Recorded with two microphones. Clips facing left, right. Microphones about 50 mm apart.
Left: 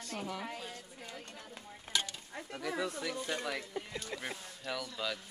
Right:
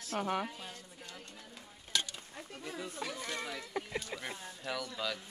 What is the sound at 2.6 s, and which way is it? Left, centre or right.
Speech, left.